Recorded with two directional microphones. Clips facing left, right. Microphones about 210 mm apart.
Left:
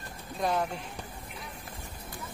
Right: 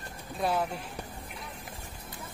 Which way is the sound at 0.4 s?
5° right (ahead or behind).